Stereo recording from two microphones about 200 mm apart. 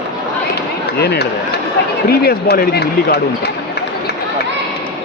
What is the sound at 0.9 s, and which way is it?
Speech, 55° left (ahead or behind).